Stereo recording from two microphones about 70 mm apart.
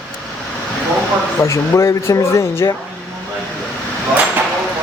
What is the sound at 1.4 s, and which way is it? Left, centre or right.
A man's voice, left.